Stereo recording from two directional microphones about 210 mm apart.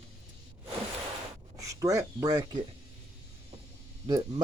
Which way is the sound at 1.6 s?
15° right (ahead or behind).